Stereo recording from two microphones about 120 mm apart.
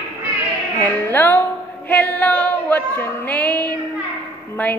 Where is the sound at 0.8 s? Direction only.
15° left (ahead or behind).